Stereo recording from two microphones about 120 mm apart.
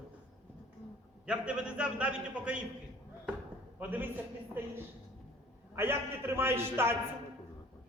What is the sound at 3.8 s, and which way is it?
Speech, 15° right (ahead or behind).